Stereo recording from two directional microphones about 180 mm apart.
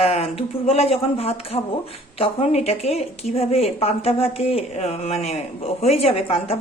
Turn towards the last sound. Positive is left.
turn(degrees=35)  # may be behind; listen again after turning